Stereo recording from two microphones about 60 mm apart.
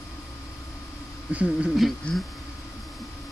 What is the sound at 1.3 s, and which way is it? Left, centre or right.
Speech, right.